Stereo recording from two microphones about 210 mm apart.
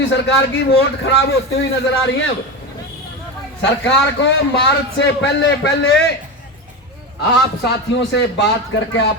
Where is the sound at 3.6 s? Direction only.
55° left (ahead or behind).